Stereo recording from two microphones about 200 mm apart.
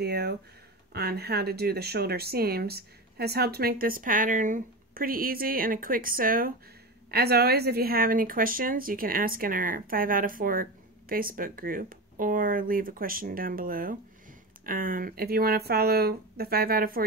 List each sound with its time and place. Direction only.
0.0 s a woman's voice: 55° right (ahead or behind)